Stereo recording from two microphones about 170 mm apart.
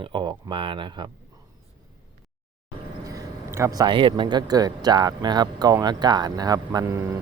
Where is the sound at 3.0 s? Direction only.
15° right (ahead or behind).